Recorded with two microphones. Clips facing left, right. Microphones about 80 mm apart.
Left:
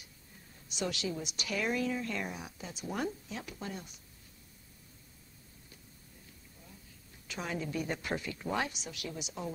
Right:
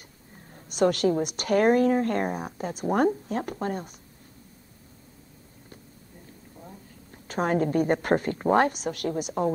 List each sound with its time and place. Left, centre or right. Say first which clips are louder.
0.7 s a woman's voice: right 14 dB; right
7.2 s a woman's voice: right 13 dB; right